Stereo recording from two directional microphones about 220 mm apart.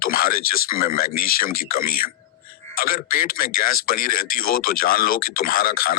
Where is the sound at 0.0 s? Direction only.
40° left (ahead or behind).